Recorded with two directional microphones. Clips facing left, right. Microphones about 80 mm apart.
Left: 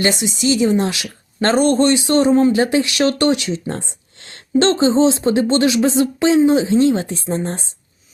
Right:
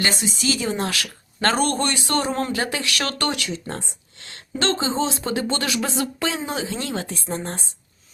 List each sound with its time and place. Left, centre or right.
0.4 s speech: left